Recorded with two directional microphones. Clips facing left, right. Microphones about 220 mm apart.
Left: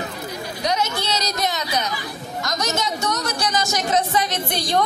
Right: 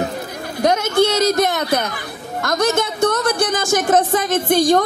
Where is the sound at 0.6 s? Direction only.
50° right (ahead or behind).